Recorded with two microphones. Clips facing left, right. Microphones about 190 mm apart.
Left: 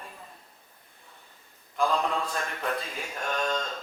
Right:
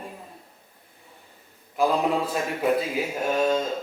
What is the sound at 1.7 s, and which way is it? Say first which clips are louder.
A woman's voice: right 5 dB; 10° right (ahead or behind).